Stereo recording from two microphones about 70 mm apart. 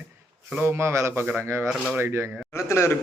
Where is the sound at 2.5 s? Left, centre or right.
Left.